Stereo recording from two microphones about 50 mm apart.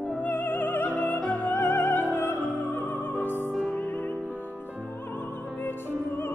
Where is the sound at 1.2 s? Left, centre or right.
Left.